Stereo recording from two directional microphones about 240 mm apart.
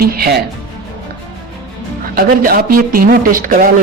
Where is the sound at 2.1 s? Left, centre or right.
Right.